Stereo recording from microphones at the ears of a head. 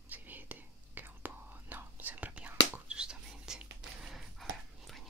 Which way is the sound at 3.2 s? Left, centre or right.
Right.